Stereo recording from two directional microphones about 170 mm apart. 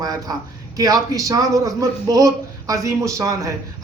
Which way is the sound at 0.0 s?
20° right (ahead or behind).